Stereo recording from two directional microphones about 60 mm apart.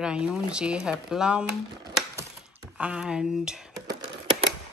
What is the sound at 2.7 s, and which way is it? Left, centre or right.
Speech, centre.